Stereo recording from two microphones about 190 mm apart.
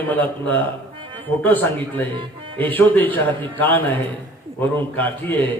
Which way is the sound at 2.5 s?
10° left (ahead or behind).